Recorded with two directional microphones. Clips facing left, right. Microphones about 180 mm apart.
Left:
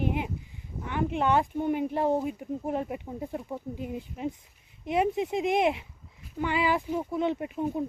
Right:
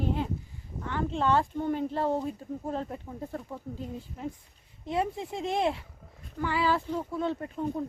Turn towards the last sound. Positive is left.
turn(degrees=15)  # may be behind; listen again after turning